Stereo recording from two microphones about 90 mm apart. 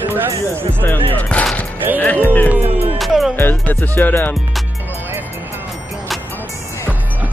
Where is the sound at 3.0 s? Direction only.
Centre (ahead or behind).